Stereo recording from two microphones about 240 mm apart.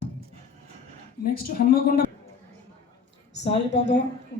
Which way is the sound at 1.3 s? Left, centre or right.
Left.